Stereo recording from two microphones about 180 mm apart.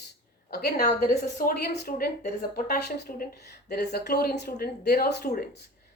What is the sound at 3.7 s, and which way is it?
Speech, 65° left (ahead or behind).